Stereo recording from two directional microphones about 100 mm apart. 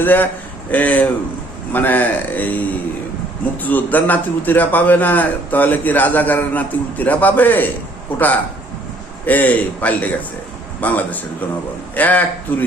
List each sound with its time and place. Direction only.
0.0 s a man's voice: 20° left (ahead or behind)
9.2 s a man's voice: 15° left (ahead or behind)